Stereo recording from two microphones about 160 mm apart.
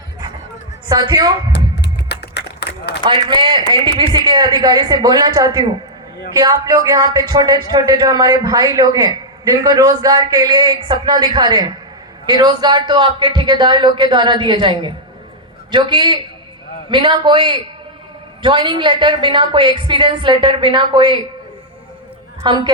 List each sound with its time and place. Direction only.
0.9 s speech: 25° right (ahead or behind)
1.5 s music: 90° left
3.0 s a woman's voice: 30° right (ahead or behind)
22.4 s speech: 25° right (ahead or behind)